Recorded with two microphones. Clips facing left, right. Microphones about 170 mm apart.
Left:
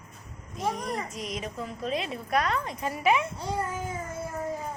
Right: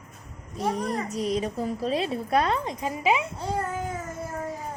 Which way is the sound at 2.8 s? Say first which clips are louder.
Even; 15° right (ahead or behind).